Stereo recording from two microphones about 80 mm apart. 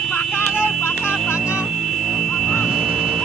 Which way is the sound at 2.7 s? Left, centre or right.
Centre.